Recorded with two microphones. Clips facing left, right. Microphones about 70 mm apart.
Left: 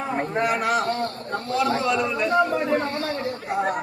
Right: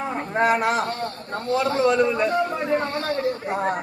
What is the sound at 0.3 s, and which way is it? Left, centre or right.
A man's voice, right.